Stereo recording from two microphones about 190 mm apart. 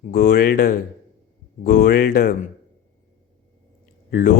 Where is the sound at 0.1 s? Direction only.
55° left (ahead or behind).